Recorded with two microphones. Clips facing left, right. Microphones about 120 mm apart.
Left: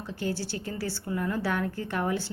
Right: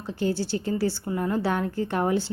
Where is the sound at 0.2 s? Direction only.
25° right (ahead or behind).